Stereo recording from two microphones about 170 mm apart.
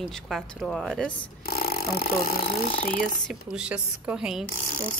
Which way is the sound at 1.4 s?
65° left (ahead or behind).